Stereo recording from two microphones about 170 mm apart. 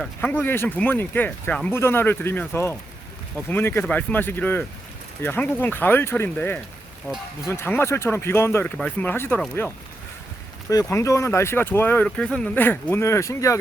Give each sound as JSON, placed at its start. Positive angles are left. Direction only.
{"t": 0.0, "sound": "speech", "side_deg": 10}